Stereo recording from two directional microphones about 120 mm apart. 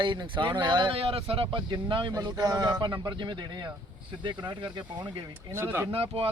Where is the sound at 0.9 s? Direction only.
50° right (ahead or behind).